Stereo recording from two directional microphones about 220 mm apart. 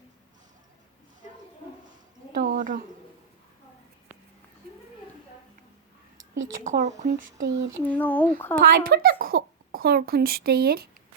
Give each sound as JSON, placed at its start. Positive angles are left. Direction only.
{"t": 2.3, "sound": "a sound", "side_deg": -40}
{"t": 6.7, "sound": "speech", "side_deg": -30}
{"t": 7.8, "sound": "speech", "side_deg": 5}
{"t": 8.5, "sound": "a child's voice", "side_deg": -45}